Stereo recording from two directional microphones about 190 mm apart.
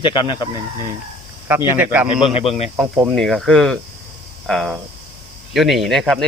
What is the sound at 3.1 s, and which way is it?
Speech, centre (ahead or behind).